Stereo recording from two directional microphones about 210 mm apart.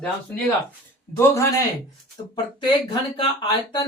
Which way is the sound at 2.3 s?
20° left (ahead or behind).